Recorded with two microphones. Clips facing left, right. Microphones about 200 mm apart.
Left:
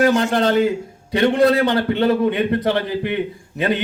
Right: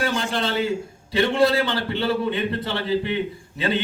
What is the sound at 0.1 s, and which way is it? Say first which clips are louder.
Speech: left 9 dB; 70° left (ahead or behind).